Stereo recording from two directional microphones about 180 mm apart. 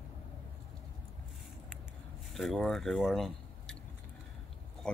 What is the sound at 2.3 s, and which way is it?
Speech, centre (ahead or behind).